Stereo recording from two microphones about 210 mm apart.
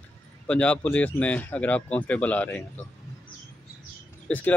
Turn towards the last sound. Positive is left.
turn(degrees=10)  # may be behind; listen again after turning